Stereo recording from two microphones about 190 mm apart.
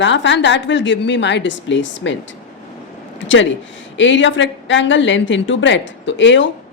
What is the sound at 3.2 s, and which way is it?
A woman's voice, 80° left.